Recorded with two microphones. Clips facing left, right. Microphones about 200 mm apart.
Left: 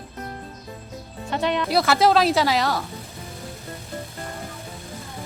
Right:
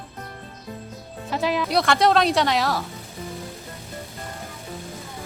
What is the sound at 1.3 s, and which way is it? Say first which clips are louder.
Speech: even; centre (ahead or behind).